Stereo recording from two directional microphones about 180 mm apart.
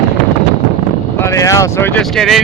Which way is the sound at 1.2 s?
15° left (ahead or behind).